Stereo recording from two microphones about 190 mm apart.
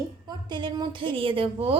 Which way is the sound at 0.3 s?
25° right (ahead or behind).